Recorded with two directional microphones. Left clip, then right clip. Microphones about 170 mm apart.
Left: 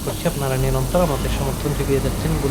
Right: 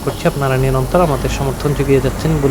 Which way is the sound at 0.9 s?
35° right (ahead or behind).